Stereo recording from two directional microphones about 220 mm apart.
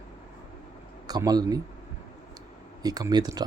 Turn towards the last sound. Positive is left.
turn(degrees=-15)  # may be behind; listen again after turning